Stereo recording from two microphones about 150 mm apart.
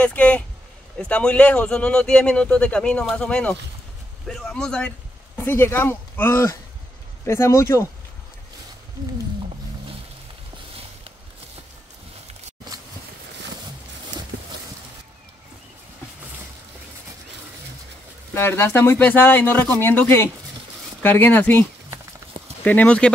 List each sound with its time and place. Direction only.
0.0 s a man's voice: 10° left (ahead or behind)
18.3 s speech: 15° left (ahead or behind)